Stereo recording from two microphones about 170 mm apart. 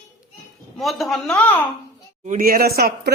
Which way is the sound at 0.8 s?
Centre (ahead or behind).